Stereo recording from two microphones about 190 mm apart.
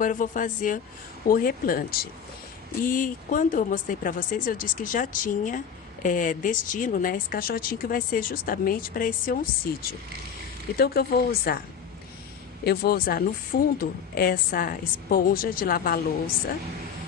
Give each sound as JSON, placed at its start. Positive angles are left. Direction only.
{"t": 0.0, "sound": "a woman's voice", "side_deg": 45}
{"t": 12.6, "sound": "a woman's voice", "side_deg": 50}